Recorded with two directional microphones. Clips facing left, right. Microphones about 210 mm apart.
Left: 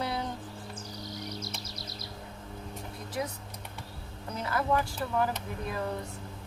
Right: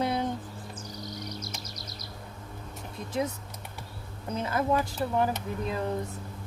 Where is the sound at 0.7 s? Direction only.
30° left (ahead or behind).